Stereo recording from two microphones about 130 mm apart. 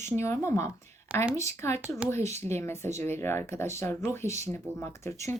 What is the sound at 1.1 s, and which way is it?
Speech, 10° right (ahead or behind).